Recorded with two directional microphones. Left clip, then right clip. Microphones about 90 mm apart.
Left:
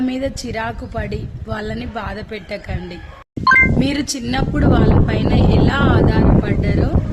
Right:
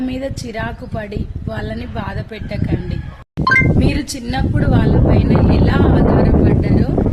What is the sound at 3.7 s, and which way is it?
Speech, 35° left (ahead or behind).